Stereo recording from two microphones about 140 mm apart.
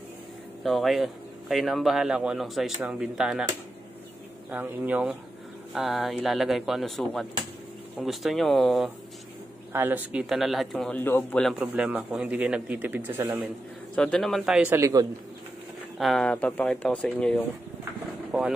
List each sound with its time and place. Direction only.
0.7 s speech: centre (ahead or behind)
4.5 s a man's voice: 15° right (ahead or behind)
9.7 s a man's voice: 15° right (ahead or behind)
10.2 s speech: centre (ahead or behind)
11.0 s speech: 15° left (ahead or behind)
11.4 s a man's voice: 5° right (ahead or behind)
13.9 s speech: 5° left (ahead or behind)
14.8 s a man's voice: 20° right (ahead or behind)
16.0 s speech: centre (ahead or behind)
18.3 s speech: 5° right (ahead or behind)